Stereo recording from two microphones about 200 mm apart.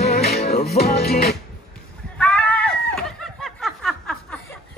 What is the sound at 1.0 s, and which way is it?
Music, 50° left (ahead or behind).